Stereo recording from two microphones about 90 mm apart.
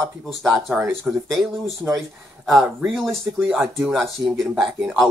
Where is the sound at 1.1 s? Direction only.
10° right (ahead or behind).